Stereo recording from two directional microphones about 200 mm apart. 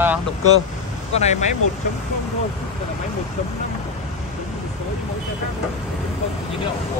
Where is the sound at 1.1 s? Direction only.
35° left (ahead or behind).